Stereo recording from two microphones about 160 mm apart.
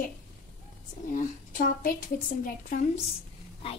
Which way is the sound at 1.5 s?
55° left (ahead or behind).